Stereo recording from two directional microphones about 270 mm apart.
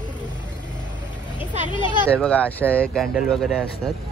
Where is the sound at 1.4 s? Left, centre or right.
Centre.